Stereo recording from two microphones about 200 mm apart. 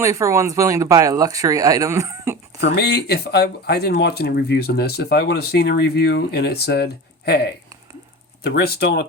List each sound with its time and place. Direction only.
0.0 s speech: 15° right (ahead or behind)
2.6 s speech: 55° left (ahead or behind)